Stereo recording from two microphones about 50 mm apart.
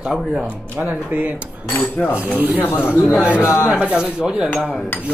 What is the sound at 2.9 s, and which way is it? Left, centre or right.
Speech, left.